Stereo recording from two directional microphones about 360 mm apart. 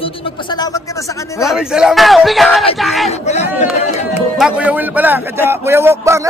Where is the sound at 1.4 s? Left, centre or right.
Centre.